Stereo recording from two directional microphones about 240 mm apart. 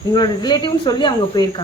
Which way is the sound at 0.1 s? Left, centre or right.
Centre.